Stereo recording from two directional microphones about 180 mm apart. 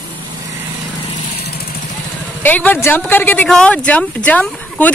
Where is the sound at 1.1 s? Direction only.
40° left (ahead or behind).